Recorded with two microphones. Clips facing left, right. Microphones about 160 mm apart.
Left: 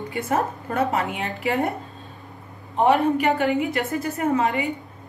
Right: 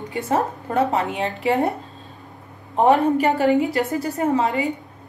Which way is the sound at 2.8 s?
40° right (ahead or behind).